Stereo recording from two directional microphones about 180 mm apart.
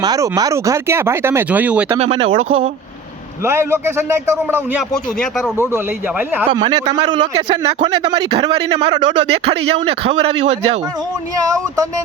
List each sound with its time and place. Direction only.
0.0 s speech: 20° right (ahead or behind)
1.9 s speech: 30° right (ahead or behind)
3.4 s speech: 15° right (ahead or behind)
6.5 s a man's voice: 25° right (ahead or behind)
11.3 s a man's voice: 20° right (ahead or behind)